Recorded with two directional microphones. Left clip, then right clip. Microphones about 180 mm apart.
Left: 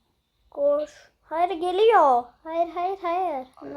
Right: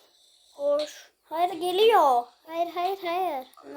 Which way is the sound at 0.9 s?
10° right (ahead or behind).